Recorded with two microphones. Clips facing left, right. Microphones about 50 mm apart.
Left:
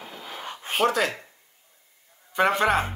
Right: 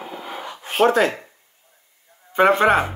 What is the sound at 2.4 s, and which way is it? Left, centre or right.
Music, right.